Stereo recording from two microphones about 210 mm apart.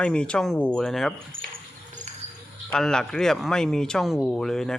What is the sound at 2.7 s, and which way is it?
Speech, 5° left (ahead or behind).